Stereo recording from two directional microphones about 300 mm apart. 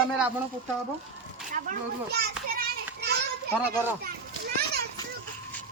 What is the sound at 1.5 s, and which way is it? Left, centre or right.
Children playing, right.